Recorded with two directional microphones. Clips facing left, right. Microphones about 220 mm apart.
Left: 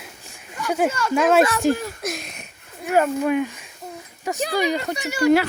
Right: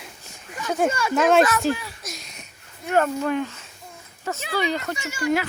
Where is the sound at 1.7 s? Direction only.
50° left (ahead or behind).